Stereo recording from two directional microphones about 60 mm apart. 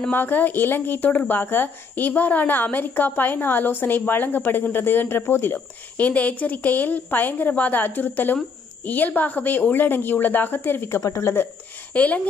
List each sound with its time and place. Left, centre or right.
0.1 s a woman's voice: left
11.0 s speech: left
11.9 s speech: left